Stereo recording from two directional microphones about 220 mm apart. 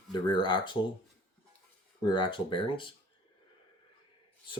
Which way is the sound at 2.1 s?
20° left (ahead or behind).